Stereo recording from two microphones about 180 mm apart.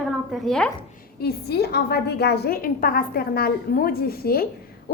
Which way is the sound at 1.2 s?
60° left (ahead or behind).